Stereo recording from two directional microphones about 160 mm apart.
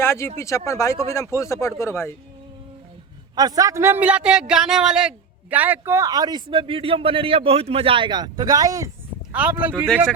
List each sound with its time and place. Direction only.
0.0 s speech: 15° left (ahead or behind)
3.3 s a man's voice: 25° right (ahead or behind)
9.3 s speech: 10° right (ahead or behind)